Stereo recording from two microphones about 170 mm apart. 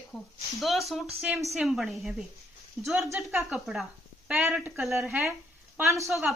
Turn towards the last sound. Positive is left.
turn(degrees=-15)  # may be behind; listen again after turning